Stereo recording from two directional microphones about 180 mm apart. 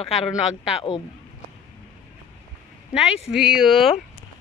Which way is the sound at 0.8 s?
30° left (ahead or behind).